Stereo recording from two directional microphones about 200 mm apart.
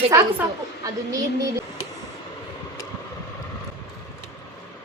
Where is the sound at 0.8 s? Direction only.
15° right (ahead or behind).